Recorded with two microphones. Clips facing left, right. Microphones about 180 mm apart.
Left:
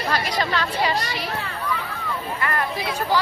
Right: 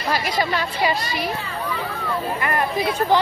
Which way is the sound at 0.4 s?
10° right (ahead or behind).